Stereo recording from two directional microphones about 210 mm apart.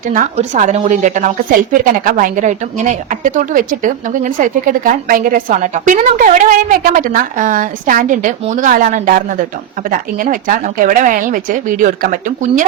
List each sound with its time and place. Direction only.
0.1 s a woman's voice: 40° right (ahead or behind)